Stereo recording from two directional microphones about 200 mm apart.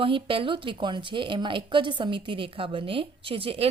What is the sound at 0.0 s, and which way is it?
A woman's voice, 25° right (ahead or behind).